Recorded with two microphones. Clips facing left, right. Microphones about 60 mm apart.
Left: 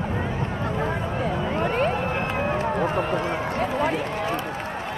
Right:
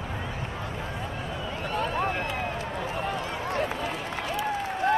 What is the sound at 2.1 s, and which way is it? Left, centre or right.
Run, left.